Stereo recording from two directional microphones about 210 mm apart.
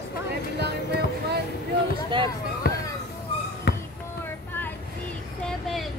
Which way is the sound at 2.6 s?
45° left (ahead or behind).